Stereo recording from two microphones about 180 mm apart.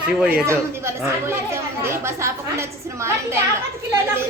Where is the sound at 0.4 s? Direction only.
15° right (ahead or behind).